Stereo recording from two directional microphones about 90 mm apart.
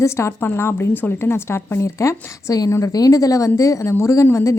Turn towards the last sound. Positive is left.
turn(degrees=35)  # may be behind; listen again after turning